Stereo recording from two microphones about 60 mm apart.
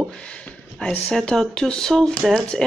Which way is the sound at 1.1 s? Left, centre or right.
Centre.